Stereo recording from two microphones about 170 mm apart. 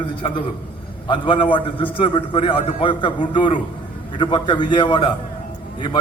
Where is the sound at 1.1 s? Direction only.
30° left (ahead or behind).